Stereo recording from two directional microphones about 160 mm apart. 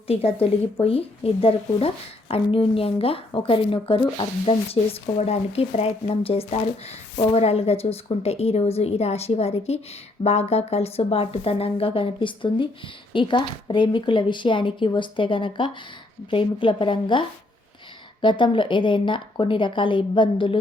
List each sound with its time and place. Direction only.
0.1 s speech: 40° left (ahead or behind)